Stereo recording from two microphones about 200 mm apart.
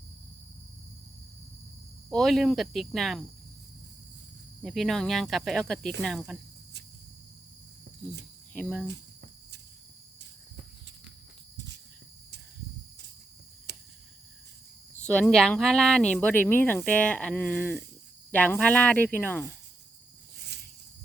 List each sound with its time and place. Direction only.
2.0 s speech: centre (ahead or behind)
4.6 s speech: centre (ahead or behind)
8.5 s speech: 5° left (ahead or behind)
8.9 s cricket: 60° right (ahead or behind)
11.5 s cricket: 65° right (ahead or behind)
13.7 s cricket: 55° right (ahead or behind)
15.0 s speech: 5° left (ahead or behind)